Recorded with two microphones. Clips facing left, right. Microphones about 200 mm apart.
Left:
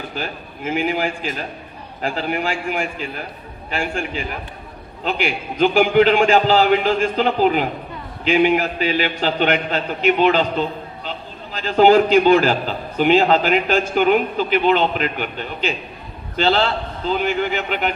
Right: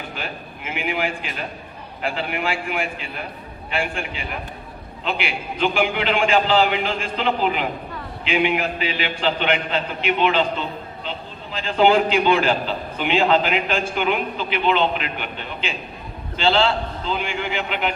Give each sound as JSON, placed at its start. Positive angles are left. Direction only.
{"t": 0.2, "sound": "a man's voice", "side_deg": 35}
{"t": 11.6, "sound": "a man's voice", "side_deg": 45}